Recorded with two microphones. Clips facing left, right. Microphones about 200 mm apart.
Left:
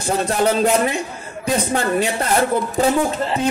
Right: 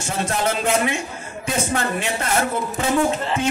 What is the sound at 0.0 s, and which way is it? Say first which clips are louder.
A man's voice: left 5 dB; 35° left (ahead or behind).